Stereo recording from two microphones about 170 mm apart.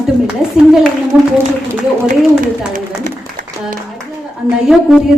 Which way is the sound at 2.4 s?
50° right (ahead or behind).